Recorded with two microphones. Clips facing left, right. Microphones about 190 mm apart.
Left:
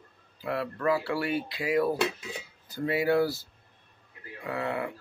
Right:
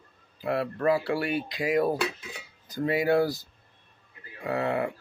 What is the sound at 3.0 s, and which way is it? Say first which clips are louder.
Speech: right 1 dB; 45° right (ahead or behind).